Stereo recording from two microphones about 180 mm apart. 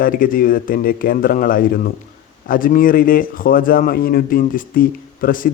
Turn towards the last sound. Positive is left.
turn(degrees=50)  # may be behind; listen again after turning